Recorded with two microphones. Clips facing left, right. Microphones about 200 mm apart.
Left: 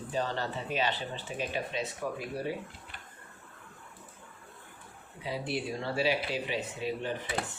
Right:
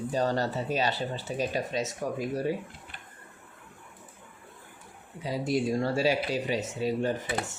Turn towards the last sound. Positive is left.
turn(degrees=-45)  # may be behind; listen again after turning